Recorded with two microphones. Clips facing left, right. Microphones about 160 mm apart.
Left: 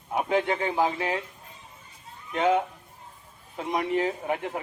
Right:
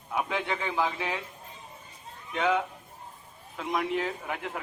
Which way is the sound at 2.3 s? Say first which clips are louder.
Left 4 dB; 35° left (ahead or behind).